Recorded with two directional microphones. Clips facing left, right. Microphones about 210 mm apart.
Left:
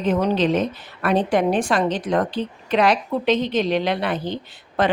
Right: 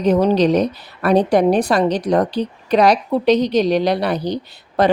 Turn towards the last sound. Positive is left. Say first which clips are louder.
# right 5 dB
turn(degrees=-40)  # may be behind; listen again after turning